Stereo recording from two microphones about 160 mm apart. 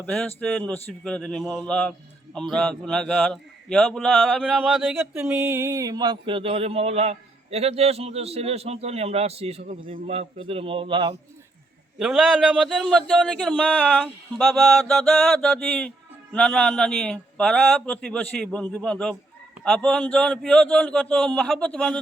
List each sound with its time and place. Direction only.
0.0 s a man's voice: 5° left (ahead or behind); by 11.1 s 30° right (ahead or behind)
11.9 s a man's voice: centre (ahead or behind)
14.0 s a man's voice: centre (ahead or behind)
14.8 s a man's voice: 10° left (ahead or behind)